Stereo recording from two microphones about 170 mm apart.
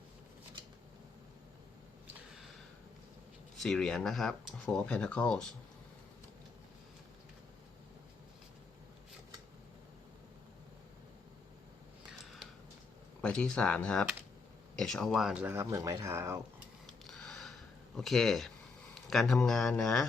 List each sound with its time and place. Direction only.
3.6 s speech: 5° left (ahead or behind)
13.2 s speech: 5° left (ahead or behind); by 16.4 s 15° right (ahead or behind)
17.1 s a sound: 5° left (ahead or behind)
19.1 s speech: 5° left (ahead or behind)